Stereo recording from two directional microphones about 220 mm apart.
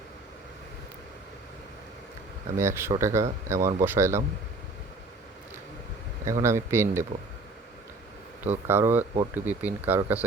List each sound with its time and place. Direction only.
2.6 s speech: 10° right (ahead or behind)
3.6 s speech: 40° right (ahead or behind)
3.8 s speech: 10° right (ahead or behind)
6.4 s speech: 10° right (ahead or behind)
8.4 s speech: 10° right (ahead or behind)